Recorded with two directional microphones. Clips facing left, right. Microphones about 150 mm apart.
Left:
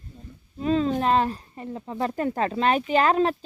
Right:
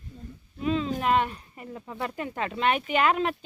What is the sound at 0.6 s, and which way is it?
Speech, 40° left (ahead or behind).